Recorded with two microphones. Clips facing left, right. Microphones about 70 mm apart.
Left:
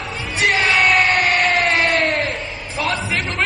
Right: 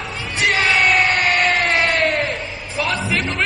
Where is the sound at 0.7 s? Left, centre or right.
Centre.